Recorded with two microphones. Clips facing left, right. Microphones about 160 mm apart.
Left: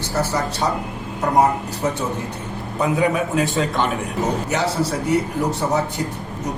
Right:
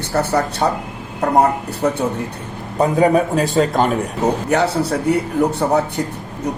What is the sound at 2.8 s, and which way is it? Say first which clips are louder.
Speech: right 5 dB; 35° right (ahead or behind).